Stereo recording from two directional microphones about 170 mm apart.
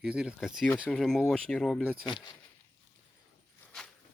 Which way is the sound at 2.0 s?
25° left (ahead or behind).